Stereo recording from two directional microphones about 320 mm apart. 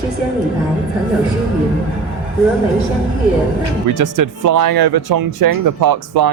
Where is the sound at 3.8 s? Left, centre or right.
Right.